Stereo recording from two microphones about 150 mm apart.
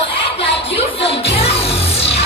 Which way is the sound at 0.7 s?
40° left (ahead or behind).